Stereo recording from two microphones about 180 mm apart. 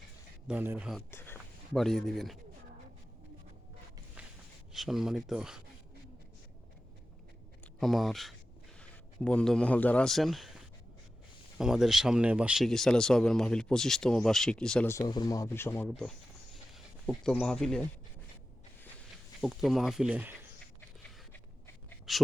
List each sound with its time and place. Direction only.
0.4 s speech: 10° right (ahead or behind)
0.9 s speech: 10° left (ahead or behind)
1.7 s speech: centre (ahead or behind)
4.7 s speech: centre (ahead or behind)
7.8 s a man's voice: centre (ahead or behind)
11.5 s speech: centre (ahead or behind)
14.8 s speech: 20° left (ahead or behind)
16.7 s speech: centre (ahead or behind)
19.4 s speech: centre (ahead or behind)
22.1 s speech: centre (ahead or behind)